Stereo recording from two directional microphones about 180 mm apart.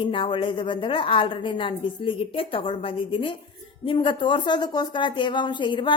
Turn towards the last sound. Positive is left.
turn(degrees=25)  # may be behind; listen again after turning